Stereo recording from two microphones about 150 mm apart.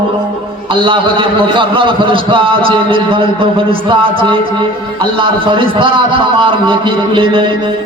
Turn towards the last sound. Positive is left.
turn(degrees=-35)  # may be behind; listen again after turning